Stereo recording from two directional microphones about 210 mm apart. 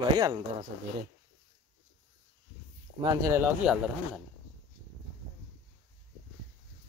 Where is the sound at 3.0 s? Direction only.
15° right (ahead or behind).